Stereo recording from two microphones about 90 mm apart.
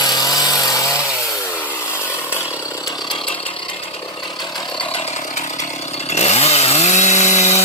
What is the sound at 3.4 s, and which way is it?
Chainsaw, 80° left.